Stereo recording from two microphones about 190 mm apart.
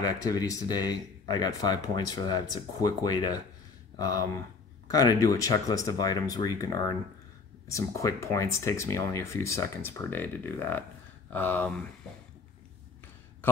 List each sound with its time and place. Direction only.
0.0 s speech: 20° left (ahead or behind)